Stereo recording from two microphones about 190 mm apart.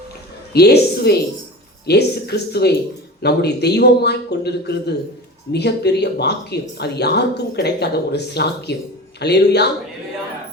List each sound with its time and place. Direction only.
0.5 s speech: 55° left (ahead or behind)